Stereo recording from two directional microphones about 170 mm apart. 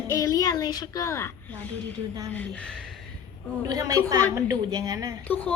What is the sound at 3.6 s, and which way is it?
A woman's voice, 20° right (ahead or behind).